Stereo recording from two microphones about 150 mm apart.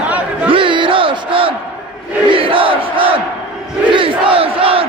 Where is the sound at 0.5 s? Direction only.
35° right (ahead or behind).